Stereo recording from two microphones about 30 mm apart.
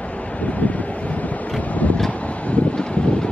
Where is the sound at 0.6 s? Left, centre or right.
Left.